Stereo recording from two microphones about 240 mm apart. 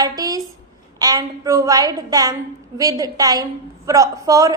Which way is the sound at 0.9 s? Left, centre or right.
Centre.